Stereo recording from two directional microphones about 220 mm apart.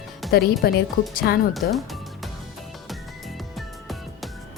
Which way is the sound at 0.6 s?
45° left (ahead or behind).